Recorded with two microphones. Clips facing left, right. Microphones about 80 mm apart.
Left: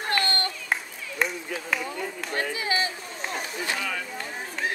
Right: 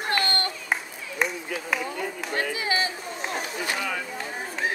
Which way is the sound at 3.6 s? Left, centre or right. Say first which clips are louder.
Even; centre.